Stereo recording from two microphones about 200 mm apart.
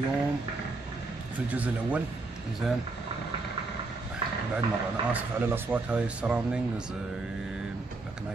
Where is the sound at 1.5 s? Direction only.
5° right (ahead or behind).